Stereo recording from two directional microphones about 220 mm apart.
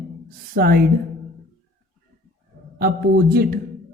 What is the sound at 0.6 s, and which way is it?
Speech, 45° right (ahead or behind).